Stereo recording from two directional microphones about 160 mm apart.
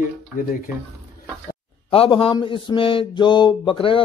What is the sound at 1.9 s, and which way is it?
Mantra, 35° left (ahead or behind).